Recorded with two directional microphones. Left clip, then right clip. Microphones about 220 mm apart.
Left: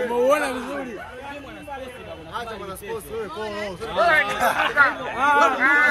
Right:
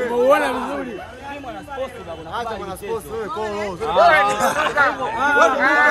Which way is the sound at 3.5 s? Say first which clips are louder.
Right 6 dB; 40° right (ahead or behind).